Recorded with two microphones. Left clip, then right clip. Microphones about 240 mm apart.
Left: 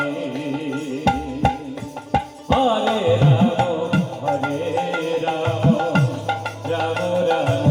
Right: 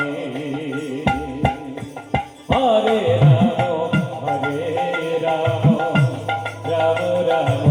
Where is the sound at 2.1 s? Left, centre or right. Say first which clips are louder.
Left 1 dB; left.